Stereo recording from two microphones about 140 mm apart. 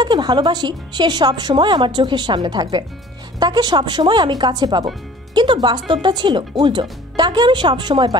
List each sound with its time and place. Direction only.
0.0 s speech: 30° right (ahead or behind)